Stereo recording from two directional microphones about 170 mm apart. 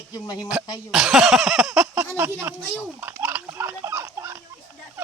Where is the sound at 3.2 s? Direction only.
10° right (ahead or behind).